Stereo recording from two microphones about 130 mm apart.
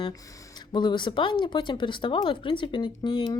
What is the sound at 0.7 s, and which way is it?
Speech, 35° left (ahead or behind).